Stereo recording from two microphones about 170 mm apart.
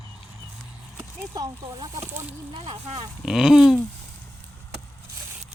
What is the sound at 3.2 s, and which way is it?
Speech, 5° right (ahead or behind).